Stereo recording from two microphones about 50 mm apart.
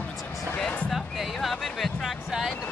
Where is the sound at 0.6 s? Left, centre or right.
Left.